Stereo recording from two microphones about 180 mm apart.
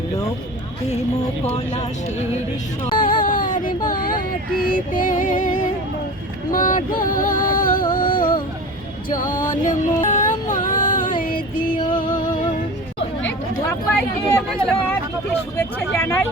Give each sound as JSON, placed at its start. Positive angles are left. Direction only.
{"t": 1.5, "sound": "speech", "side_deg": 40}
{"t": 2.9, "sound": "a sound", "side_deg": 25}
{"t": 3.2, "sound": "child singing", "side_deg": 50}
{"t": 3.8, "sound": "a sound", "side_deg": 50}
{"t": 4.6, "sound": "music", "side_deg": 50}
{"t": 12.1, "sound": "music", "side_deg": 50}
{"t": 14.5, "sound": "speech", "side_deg": 5}